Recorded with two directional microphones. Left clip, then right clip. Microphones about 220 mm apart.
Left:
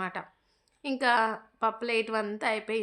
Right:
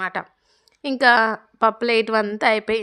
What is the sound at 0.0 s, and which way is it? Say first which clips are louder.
A woman's voice: right 9 dB; 40° right (ahead or behind).